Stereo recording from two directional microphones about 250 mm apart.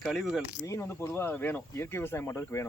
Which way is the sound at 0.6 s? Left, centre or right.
Centre.